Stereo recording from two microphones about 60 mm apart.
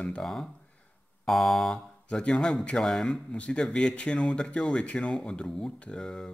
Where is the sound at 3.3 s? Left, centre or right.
Centre.